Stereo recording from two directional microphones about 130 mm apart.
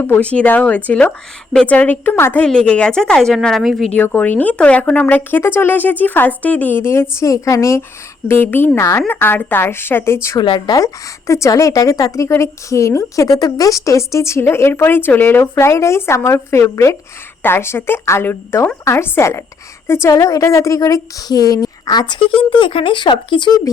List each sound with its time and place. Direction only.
0.0 s a woman's voice: 15° left (ahead or behind)
3.9 s speech: 15° left (ahead or behind)
10.4 s speech: 40° left (ahead or behind)
11.3 s speech: 25° left (ahead or behind)